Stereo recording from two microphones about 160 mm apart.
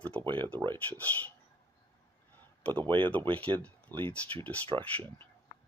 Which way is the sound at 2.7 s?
10° left (ahead or behind).